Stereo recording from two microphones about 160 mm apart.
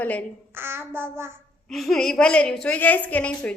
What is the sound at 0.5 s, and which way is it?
Child singing, 15° right (ahead or behind).